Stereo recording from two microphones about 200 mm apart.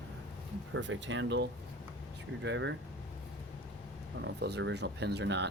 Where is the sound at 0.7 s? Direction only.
75° right (ahead or behind).